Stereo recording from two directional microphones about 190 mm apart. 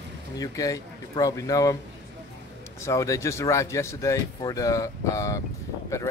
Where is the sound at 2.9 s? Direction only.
15° left (ahead or behind).